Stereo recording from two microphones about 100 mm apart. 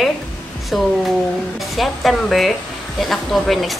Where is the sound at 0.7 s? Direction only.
Centre (ahead or behind).